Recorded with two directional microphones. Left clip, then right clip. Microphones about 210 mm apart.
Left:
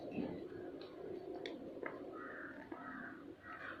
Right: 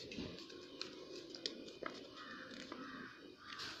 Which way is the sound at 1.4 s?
5° right (ahead or behind).